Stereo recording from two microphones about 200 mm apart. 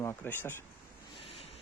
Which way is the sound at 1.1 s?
30° left (ahead or behind).